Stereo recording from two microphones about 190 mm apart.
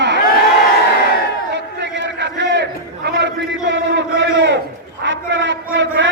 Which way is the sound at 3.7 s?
70° right (ahead or behind).